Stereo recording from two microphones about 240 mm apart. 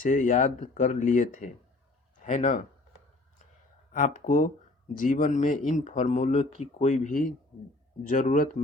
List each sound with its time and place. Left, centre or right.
0.0 s speech: left
3.9 s speech: left